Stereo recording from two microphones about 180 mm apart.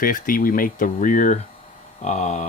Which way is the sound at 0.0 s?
50° left (ahead or behind).